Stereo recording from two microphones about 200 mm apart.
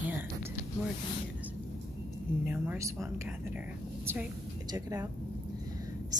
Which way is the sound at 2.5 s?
10° right (ahead or behind).